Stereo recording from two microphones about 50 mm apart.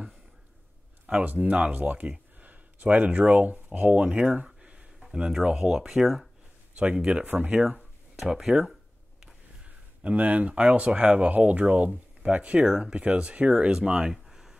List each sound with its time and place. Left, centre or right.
1.0 s speech: right
4.6 s a sound: centre
5.2 s speech: centre
6.8 s speech: right
8.2 s speech: centre
9.7 s speech: right
12.6 s speech: centre
14.1 s a sound: centre